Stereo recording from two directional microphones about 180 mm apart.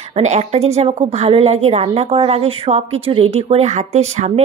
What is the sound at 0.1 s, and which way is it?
A woman's voice, 40° right (ahead or behind).